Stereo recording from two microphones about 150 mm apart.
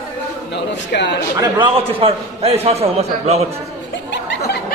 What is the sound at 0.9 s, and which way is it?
Speech, 90° left.